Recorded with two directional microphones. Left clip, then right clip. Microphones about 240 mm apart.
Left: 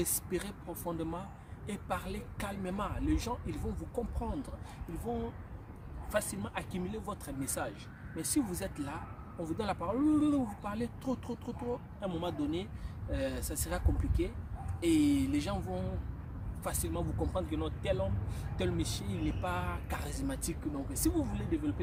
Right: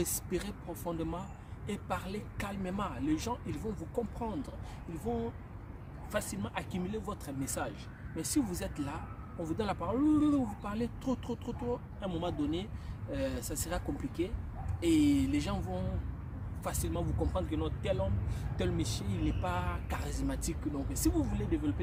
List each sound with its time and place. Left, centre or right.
0.0 s speech: centre
6.1 s speech: centre